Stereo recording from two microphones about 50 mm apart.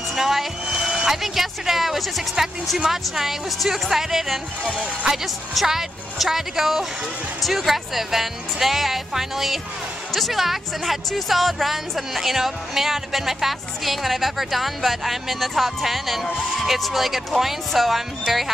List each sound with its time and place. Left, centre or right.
0.1 s speech: centre
4.6 s speech: centre
5.1 s speech: centre